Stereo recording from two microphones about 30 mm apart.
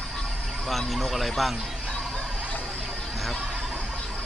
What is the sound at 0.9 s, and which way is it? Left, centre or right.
Speech, centre.